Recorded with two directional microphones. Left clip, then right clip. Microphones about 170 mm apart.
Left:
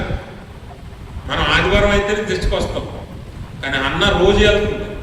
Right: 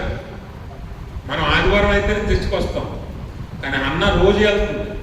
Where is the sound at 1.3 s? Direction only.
20° left (ahead or behind).